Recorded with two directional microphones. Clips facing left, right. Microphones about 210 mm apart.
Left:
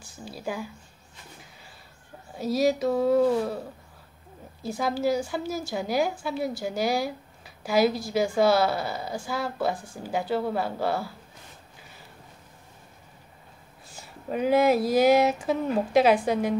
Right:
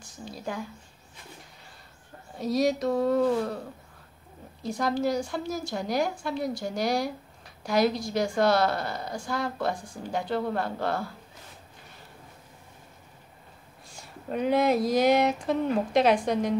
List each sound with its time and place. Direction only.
0.0 s speech: 5° left (ahead or behind)
2.3 s a woman's voice: 5° left (ahead or behind)
4.6 s a woman's voice: 5° left (ahead or behind)
13.8 s a woman's voice: 5° left (ahead or behind)